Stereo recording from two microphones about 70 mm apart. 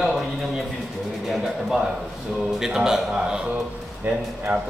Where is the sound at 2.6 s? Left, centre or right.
Centre.